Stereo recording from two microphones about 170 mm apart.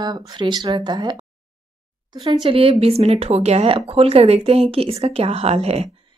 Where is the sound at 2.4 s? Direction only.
35° right (ahead or behind).